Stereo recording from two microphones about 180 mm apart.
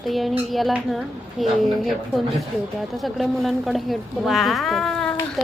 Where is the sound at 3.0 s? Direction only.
Centre (ahead or behind).